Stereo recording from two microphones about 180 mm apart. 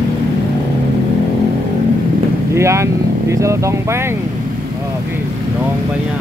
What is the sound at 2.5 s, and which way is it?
Speech, 15° right (ahead or behind).